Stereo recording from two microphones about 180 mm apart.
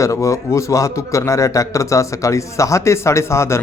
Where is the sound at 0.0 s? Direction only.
15° left (ahead or behind).